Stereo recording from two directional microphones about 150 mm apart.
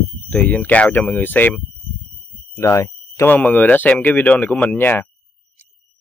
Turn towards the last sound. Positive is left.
turn(degrees=10)  # may be behind; listen again after turning